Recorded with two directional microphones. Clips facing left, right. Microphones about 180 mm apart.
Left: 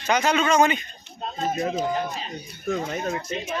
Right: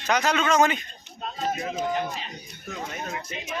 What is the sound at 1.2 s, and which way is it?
Speech, 35° left (ahead or behind).